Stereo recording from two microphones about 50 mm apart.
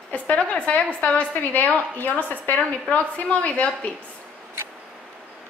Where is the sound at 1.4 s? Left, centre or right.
Left.